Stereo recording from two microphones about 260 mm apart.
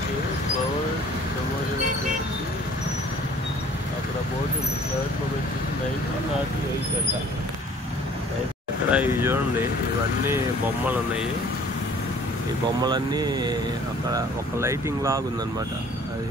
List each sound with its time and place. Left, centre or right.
8.9 s vehicle: centre
12.8 s speech: centre